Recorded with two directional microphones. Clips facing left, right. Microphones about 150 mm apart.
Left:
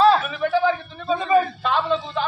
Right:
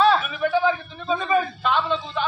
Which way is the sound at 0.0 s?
35° left (ahead or behind).